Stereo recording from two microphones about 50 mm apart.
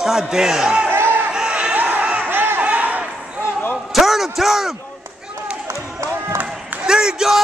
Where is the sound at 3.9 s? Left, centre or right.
Centre.